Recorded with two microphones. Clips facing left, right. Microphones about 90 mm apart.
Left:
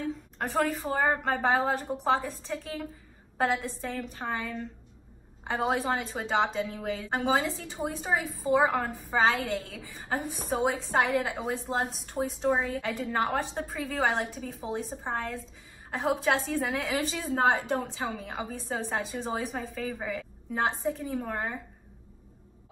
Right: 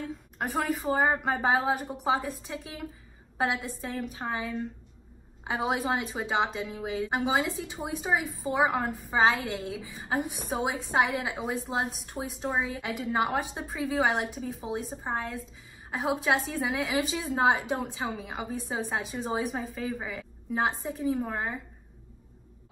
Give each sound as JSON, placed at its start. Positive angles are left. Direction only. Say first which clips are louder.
{"t": 0.4, "sound": "a woman's voice", "louder": "left 1 dB", "side_deg": -5}